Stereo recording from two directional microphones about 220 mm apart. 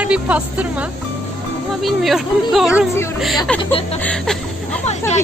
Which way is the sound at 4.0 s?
5° left (ahead or behind).